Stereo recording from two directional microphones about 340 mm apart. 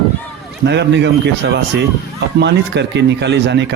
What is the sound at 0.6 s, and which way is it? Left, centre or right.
Speech, right.